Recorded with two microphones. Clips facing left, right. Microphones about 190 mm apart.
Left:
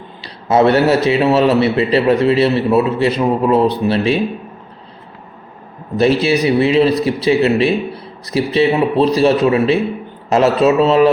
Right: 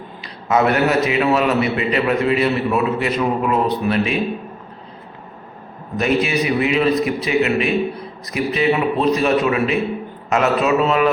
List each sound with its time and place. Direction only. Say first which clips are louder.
0.2 s a man's voice: left 5 dB; 30° left (ahead or behind)
6.0 s a man's voice: left 5 dB; 30° left (ahead or behind)